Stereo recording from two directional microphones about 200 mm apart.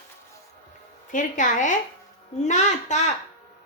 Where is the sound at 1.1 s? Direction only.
40° left (ahead or behind).